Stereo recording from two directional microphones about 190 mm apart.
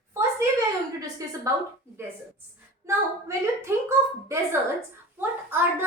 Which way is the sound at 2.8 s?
15° right (ahead or behind).